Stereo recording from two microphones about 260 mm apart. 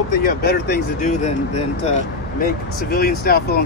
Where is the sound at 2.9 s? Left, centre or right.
Left.